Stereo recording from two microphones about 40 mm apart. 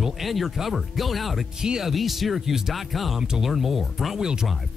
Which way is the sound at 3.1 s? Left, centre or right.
Centre.